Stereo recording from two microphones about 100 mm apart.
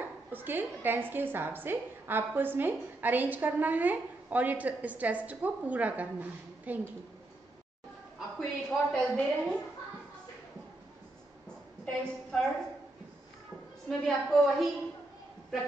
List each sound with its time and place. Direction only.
0.3 s a woman's voice: 20° right (ahead or behind)
8.4 s a woman's voice: 10° left (ahead or behind)
11.8 s a woman's voice: 10° left (ahead or behind)
13.8 s a woman's voice: 5° left (ahead or behind)